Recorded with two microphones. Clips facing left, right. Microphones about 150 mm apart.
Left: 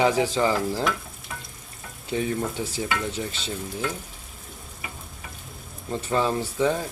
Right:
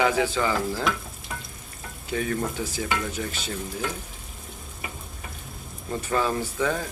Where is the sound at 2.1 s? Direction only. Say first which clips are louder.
Left 1 dB; 25° left (ahead or behind).